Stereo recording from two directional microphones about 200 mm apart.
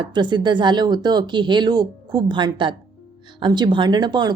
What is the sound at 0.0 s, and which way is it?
A woman's voice, 20° right (ahead or behind).